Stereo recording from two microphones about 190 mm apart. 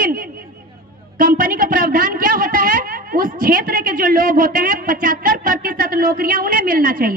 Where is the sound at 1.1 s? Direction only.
50° right (ahead or behind).